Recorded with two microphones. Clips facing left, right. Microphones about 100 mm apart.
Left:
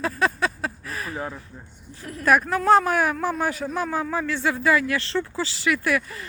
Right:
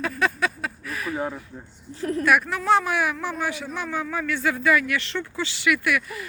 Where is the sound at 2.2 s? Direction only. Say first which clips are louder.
Left 3 dB; 35° left (ahead or behind).